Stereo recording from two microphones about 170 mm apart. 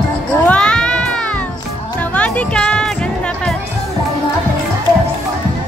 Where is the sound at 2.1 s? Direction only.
10° left (ahead or behind).